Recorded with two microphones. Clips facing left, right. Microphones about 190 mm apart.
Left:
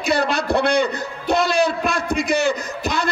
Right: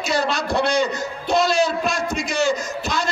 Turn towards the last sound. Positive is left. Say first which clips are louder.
# left 1 dB
turn(degrees=60)  # may be behind; listen again after turning